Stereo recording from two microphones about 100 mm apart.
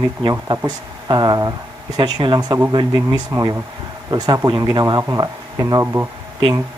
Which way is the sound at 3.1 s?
35° right (ahead or behind).